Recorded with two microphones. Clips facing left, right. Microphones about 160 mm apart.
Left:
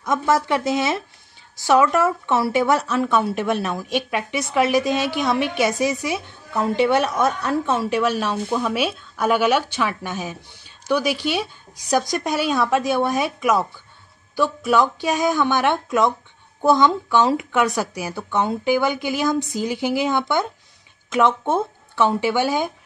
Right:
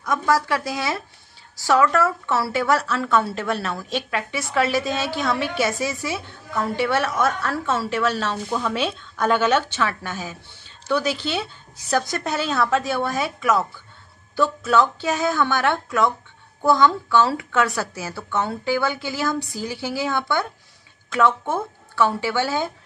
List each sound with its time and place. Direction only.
0.0 s a woman's voice: 20° left (ahead or behind)